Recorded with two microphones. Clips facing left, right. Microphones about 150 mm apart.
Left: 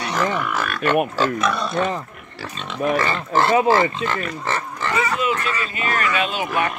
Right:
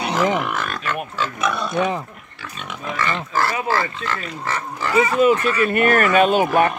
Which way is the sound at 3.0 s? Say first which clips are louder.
Left 2 dB; 30° left (ahead or behind).